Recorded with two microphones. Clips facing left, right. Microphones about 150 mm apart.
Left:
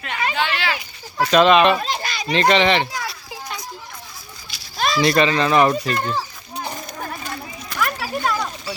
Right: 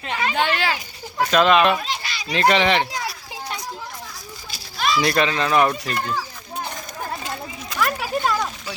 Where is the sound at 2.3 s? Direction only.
5° right (ahead or behind).